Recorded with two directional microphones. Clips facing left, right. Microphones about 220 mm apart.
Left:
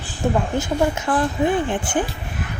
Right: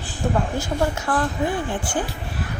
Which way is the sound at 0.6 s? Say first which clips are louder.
Left 3 dB; 20° left (ahead or behind).